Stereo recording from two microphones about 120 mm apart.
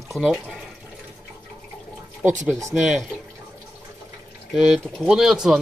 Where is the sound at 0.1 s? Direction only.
Centre (ahead or behind).